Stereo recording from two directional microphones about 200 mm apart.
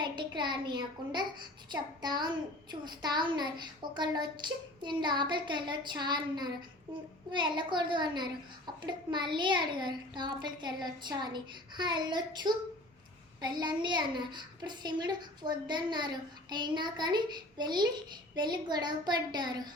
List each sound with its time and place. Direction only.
0.0 s a child's voice: 25° right (ahead or behind)